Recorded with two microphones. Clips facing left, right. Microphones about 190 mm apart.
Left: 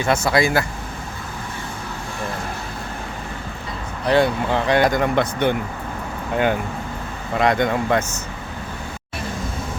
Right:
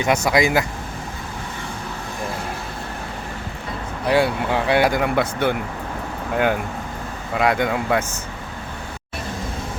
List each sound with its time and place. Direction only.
0.3 s speech: 15° right (ahead or behind)
4.0 s speech: 10° right (ahead or behind)